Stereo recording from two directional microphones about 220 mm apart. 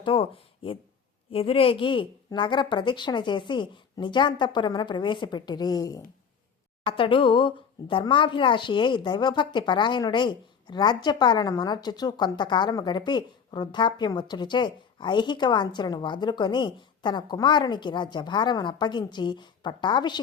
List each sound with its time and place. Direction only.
0.0 s speech: 25° left (ahead or behind)